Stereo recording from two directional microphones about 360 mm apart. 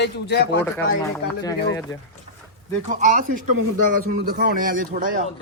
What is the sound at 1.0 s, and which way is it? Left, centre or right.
Speech, centre.